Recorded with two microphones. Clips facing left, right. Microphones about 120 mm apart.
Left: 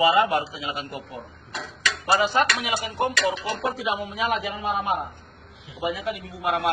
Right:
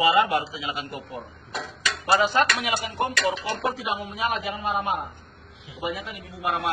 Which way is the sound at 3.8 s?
90° left.